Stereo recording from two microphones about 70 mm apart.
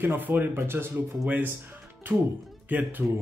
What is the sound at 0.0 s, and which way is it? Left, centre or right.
Speech, right.